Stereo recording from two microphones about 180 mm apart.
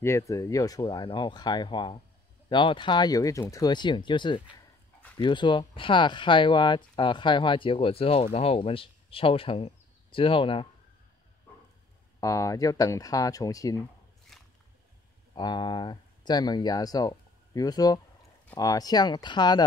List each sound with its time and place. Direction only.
0.0 s speech: 15° left (ahead or behind)
12.2 s speech: 15° left (ahead or behind)
14.3 s a sound: centre (ahead or behind)
15.3 s speech: 25° left (ahead or behind)